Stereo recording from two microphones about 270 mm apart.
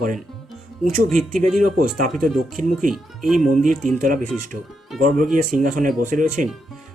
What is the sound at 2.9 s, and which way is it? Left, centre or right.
Speech, centre.